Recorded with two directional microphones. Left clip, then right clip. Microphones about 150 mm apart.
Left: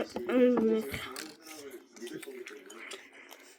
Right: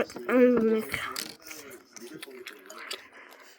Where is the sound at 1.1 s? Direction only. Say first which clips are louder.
Right 5 dB; 45° right (ahead or behind).